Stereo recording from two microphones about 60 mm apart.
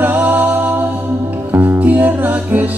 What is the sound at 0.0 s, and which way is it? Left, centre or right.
Music, right.